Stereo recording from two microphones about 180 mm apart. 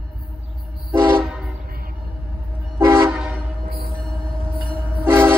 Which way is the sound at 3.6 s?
55° right (ahead or behind).